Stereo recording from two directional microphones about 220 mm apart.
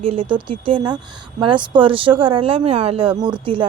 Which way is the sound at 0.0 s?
25° right (ahead or behind).